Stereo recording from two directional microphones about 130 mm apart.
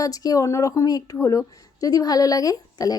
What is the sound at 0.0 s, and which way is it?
A woman's voice, 30° left (ahead or behind).